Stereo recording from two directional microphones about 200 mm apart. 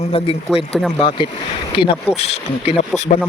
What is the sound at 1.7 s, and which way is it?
Speech, 25° left (ahead or behind).